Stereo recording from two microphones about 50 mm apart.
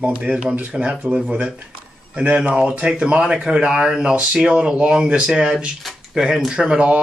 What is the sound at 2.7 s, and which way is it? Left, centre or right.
Speech, right.